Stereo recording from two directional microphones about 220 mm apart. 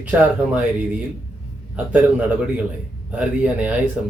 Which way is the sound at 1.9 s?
5° right (ahead or behind).